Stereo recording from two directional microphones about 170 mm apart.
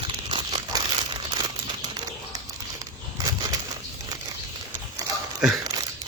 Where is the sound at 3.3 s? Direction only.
20° right (ahead or behind).